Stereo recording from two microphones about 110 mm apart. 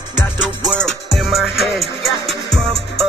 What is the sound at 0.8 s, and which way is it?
Music, centre (ahead or behind).